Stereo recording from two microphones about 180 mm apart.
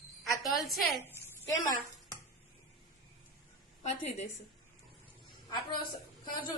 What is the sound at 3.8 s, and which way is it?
Speech, 40° left (ahead or behind).